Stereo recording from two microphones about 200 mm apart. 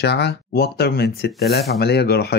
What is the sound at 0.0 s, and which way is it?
Speech, 55° left (ahead or behind).